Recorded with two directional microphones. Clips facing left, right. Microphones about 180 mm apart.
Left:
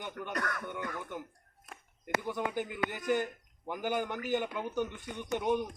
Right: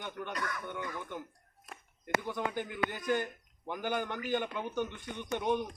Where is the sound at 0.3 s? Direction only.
60° left (ahead or behind).